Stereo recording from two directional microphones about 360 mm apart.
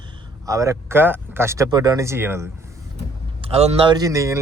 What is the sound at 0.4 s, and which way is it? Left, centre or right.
Speech, centre.